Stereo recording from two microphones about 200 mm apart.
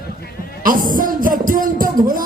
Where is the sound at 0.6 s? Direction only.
45° right (ahead or behind).